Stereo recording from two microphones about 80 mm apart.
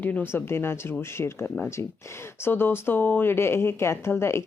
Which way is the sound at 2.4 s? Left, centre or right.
Left.